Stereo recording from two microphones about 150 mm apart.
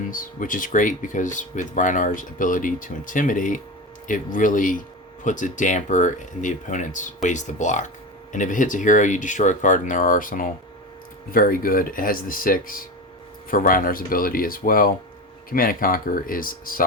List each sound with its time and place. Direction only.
0.0 s speech: 65° left (ahead or behind)